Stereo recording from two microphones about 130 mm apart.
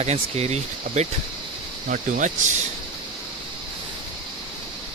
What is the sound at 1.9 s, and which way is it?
Speech, 75° right (ahead or behind).